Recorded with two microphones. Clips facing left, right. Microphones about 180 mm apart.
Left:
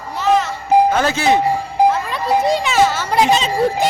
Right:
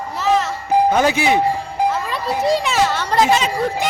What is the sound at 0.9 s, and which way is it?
Speech, 15° right (ahead or behind).